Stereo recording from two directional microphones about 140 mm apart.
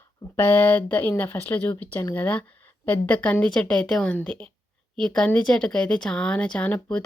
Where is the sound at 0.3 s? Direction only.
15° left (ahead or behind).